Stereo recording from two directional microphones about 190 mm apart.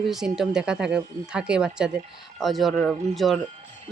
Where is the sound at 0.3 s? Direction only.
5° right (ahead or behind).